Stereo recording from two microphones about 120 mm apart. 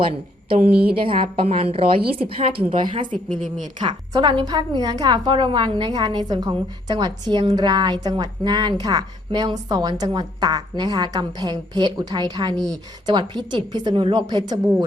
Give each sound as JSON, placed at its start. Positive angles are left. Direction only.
{"t": 0.6, "sound": "a woman's voice", "side_deg": -10}
{"t": 0.9, "sound": "a woman's voice", "side_deg": -45}